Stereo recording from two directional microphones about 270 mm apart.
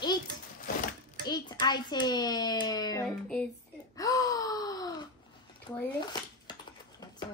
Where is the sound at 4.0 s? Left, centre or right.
Centre.